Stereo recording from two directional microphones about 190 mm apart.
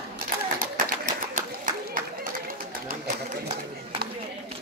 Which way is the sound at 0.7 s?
45° right (ahead or behind).